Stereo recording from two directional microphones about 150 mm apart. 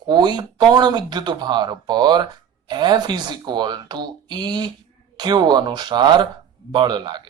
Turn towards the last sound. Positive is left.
turn(degrees=-30)  # may be behind; listen again after turning